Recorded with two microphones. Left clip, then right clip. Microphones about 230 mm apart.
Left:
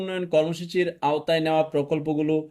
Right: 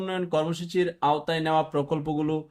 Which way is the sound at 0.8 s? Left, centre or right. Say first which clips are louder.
Even; centre.